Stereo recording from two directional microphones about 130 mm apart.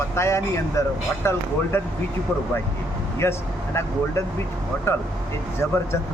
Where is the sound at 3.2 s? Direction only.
20° left (ahead or behind).